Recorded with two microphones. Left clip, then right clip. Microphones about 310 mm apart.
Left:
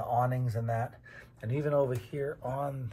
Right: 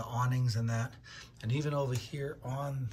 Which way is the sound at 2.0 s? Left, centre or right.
Centre.